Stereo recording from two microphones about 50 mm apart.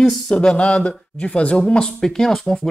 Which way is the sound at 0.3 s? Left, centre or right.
Centre.